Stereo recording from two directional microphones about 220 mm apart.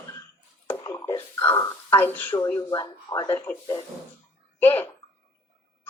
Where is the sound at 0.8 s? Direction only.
15° left (ahead or behind).